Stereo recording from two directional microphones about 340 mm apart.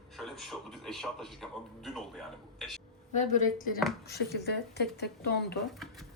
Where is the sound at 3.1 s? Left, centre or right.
Left.